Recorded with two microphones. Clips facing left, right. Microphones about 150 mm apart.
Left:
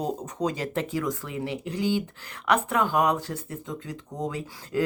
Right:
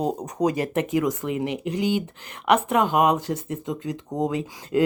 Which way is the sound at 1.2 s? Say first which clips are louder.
Right 6 dB; 20° right (ahead or behind).